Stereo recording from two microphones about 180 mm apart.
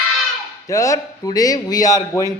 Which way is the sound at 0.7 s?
15° left (ahead or behind).